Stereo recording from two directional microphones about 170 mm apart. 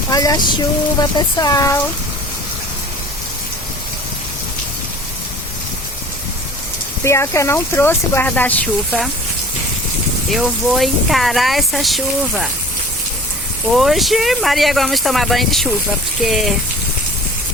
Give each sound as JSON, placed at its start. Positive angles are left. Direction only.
{"t": 0.1, "sound": "speech", "side_deg": 20}
{"t": 7.0, "sound": "speech", "side_deg": 15}
{"t": 10.2, "sound": "speech", "side_deg": 0}
{"t": 13.7, "sound": "speech", "side_deg": 0}